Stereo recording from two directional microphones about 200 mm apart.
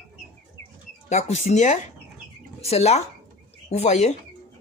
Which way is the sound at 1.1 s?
35° left (ahead or behind).